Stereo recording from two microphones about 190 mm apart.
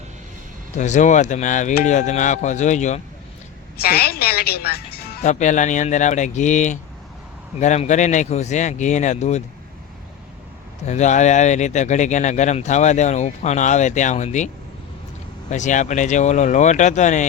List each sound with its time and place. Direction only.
0.8 s speech: 40° left (ahead or behind)
3.8 s a woman's voice: 55° left (ahead or behind)
5.2 s speech: 40° left (ahead or behind)
10.8 s speech: 40° left (ahead or behind)